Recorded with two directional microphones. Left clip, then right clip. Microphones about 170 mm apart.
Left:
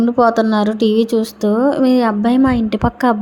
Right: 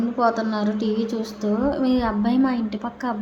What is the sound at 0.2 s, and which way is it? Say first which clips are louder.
Speech: left 8 dB; 50° left (ahead or behind).